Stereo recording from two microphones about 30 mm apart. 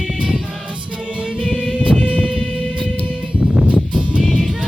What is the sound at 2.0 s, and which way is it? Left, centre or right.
Music, left.